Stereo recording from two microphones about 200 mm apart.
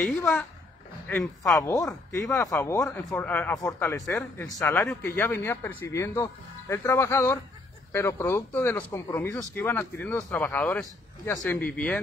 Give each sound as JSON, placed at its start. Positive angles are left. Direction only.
{"t": 0.0, "sound": "speech", "side_deg": 5}
{"t": 1.5, "sound": "speech", "side_deg": 15}